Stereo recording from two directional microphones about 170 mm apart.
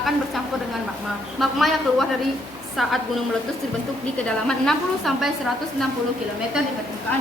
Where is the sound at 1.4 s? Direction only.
Centre (ahead or behind).